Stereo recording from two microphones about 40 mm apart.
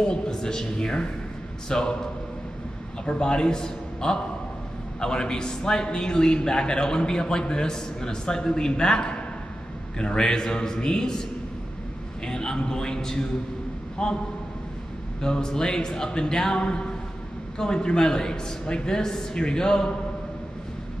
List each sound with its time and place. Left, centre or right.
0.0 s a man's voice: centre
3.1 s a man's voice: left
12.3 s a man's voice: centre
15.2 s a man's voice: centre